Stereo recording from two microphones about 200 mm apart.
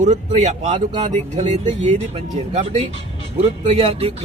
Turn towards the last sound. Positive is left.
turn(degrees=-30)  # may be behind; listen again after turning